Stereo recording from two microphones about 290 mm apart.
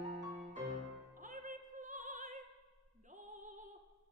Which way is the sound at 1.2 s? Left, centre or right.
Right.